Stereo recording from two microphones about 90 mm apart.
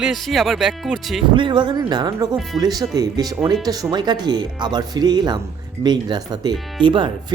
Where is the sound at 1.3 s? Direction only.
60° right (ahead or behind).